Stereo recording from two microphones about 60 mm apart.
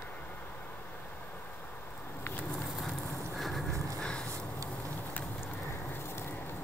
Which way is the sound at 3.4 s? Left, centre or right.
Centre.